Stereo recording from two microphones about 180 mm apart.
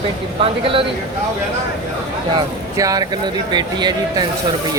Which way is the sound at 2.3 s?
20° right (ahead or behind).